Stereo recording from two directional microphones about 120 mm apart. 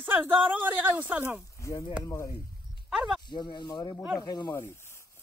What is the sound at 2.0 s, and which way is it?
Speech, 20° left (ahead or behind).